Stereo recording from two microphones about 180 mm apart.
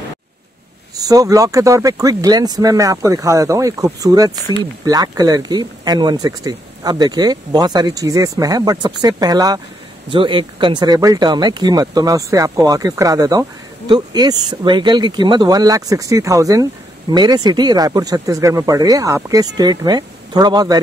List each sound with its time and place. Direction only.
0.9 s speech: 20° right (ahead or behind)